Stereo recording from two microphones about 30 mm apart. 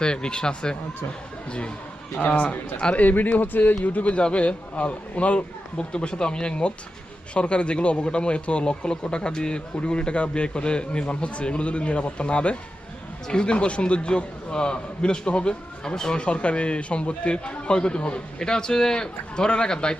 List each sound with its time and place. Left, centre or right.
0.0 s a man's voice: left
1.5 s a man's voice: left
2.2 s speech: left
2.9 s speech: left
4.2 s a man's voice: left
5.7 s a man's voice: left
15.8 s a man's voice: left
16.1 s a man's voice: left